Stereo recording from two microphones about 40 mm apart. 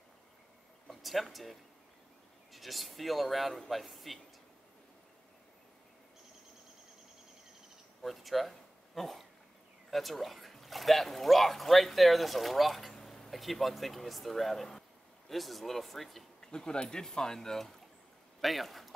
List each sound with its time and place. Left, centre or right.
0.8 s speech: centre
8.0 s a sound: centre
9.8 s speech: centre
16.3 s speech: left; by 18.9 s centre